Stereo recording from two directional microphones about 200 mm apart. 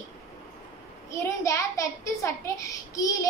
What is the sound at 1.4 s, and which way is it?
A woman's voice, 15° left (ahead or behind).